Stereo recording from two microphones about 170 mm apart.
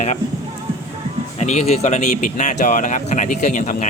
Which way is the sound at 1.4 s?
40° left (ahead or behind).